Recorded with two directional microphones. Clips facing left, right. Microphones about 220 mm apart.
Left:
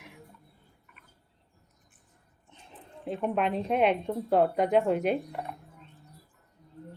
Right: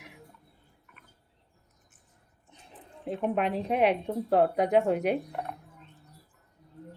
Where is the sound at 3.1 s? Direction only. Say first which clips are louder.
Even; centre (ahead or behind).